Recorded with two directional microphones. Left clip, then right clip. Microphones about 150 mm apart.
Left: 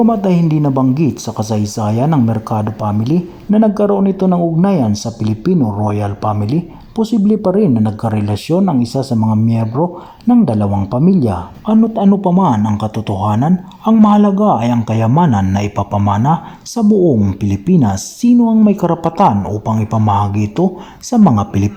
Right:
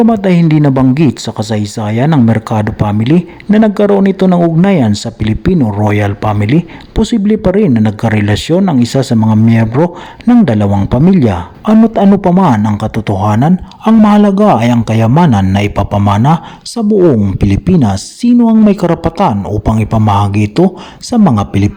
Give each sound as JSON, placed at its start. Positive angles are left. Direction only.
{"t": 0.0, "sound": "speech", "side_deg": -30}
{"t": 7.3, "sound": "speech", "side_deg": -15}
{"t": 9.7, "sound": "speech", "side_deg": -30}
{"t": 10.4, "sound": "speech", "side_deg": -20}